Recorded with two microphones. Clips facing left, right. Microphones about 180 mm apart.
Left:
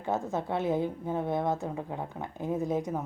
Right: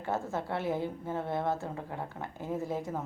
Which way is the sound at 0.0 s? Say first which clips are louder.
Left 3 dB; 20° left (ahead or behind).